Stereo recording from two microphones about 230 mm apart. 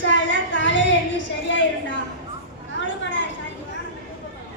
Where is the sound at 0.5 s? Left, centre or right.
Left.